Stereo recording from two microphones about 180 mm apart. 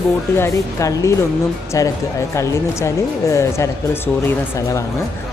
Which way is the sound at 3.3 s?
15° left (ahead or behind).